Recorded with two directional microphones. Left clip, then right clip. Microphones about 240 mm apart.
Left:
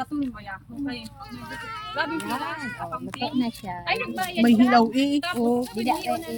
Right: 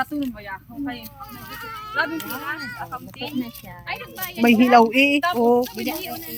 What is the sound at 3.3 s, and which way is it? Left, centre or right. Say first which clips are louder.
A child's voice: left 3 dB; left.